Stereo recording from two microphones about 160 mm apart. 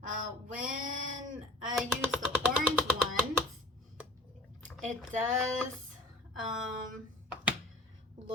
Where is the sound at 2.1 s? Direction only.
5° right (ahead or behind).